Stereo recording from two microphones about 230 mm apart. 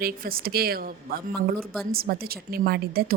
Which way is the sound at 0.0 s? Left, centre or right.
Right.